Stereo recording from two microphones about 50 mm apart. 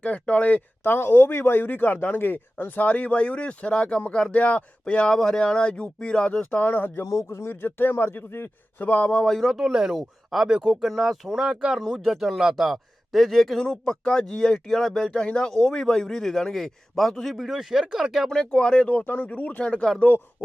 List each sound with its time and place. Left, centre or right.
0.0 s speech: left
0.9 s speech: left
6.6 s speech: left
7.3 s speech: left
7.5 s speech: left
9.2 s speech: centre
13.6 s speech: centre
17.3 s speech: centre
18.5 s speech: centre; by 20.2 s left